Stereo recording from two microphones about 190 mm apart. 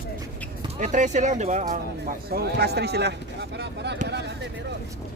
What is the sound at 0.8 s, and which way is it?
Speech, 40° right (ahead or behind).